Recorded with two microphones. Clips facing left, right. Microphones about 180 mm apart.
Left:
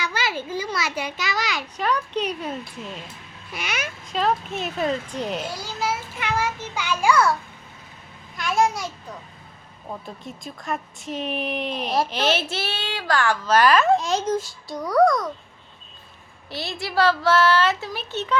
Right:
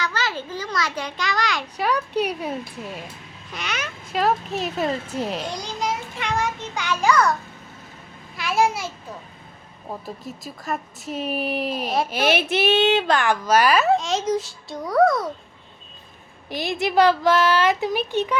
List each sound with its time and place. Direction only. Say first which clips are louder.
0.0 s a sound: even; 10° left (ahead or behind)
1.7 s speech: right 1 dB; 10° right (ahead or behind)
3.5 s speech: even; 10° left (ahead or behind)
4.1 s speech: right 2 dB; 5° right (ahead or behind); by 7.3 s 10° left (ahead or behind)
8.4 s a child's voice: even; 5° right (ahead or behind)
10.2 s speech: even; 5° right (ahead or behind)
16.5 s speech: right 6 dB; 15° right (ahead or behind)